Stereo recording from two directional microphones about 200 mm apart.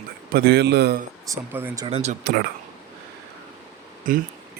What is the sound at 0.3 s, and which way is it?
Speech, 55° right (ahead or behind).